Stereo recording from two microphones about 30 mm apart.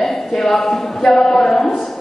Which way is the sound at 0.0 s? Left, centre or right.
Centre.